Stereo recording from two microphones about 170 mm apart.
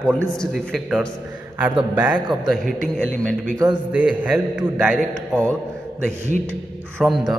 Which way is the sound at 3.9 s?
5° right (ahead or behind).